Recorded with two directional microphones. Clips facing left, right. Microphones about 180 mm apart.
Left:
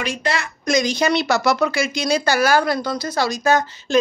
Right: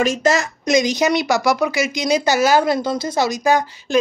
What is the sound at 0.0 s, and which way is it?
Speech, 45° right (ahead or behind).